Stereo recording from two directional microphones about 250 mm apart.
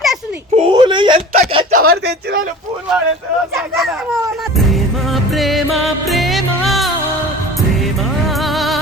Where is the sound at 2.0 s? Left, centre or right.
Right.